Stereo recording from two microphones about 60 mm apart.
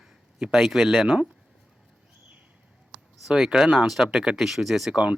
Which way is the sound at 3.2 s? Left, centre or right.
Centre.